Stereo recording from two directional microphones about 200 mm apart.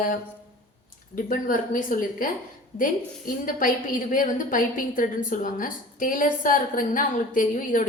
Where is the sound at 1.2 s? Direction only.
45° left (ahead or behind).